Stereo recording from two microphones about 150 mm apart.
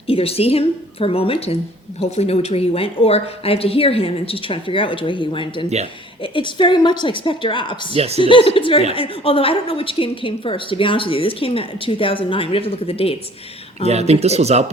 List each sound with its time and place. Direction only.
0.1 s a woman's voice: 40° left (ahead or behind)
5.6 s speech: 45° right (ahead or behind)
6.2 s a woman's voice: 35° left (ahead or behind)
7.9 s speech: 45° right (ahead or behind)
8.2 s a woman's voice: 35° left (ahead or behind)
13.8 s speech: 45° right (ahead or behind)